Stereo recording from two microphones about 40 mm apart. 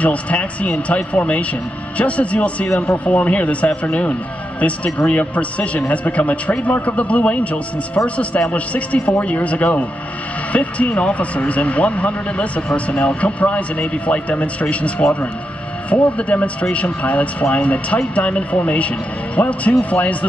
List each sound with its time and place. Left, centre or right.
0.0 s speech: left